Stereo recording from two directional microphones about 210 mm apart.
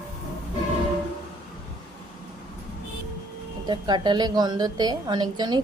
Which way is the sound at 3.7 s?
20° right (ahead or behind).